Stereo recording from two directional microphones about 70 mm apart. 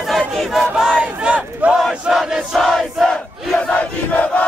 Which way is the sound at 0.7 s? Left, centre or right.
Centre.